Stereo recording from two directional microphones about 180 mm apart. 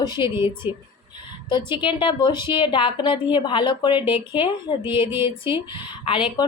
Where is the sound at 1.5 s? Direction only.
25° left (ahead or behind).